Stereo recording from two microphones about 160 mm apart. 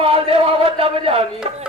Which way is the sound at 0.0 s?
35° right (ahead or behind).